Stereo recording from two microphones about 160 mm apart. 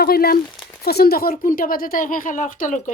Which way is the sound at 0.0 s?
70° left (ahead or behind).